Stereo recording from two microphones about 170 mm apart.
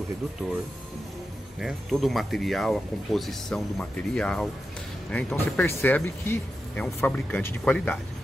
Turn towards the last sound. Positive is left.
turn(degrees=10)  # may be behind; listen again after turning